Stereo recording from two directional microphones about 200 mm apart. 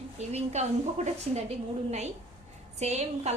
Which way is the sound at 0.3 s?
35° right (ahead or behind).